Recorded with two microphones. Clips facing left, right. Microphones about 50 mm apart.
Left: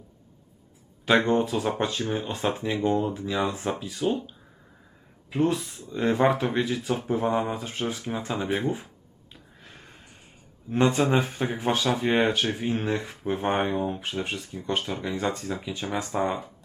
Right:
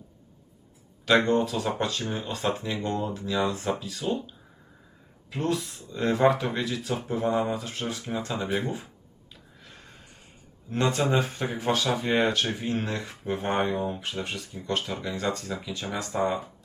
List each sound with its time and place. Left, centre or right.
1.0 s speech: centre
5.3 s speech: centre
9.6 s snort: centre
10.7 s speech: centre
13.7 s speech: centre